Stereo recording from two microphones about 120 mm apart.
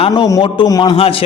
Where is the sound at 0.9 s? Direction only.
50° left (ahead or behind).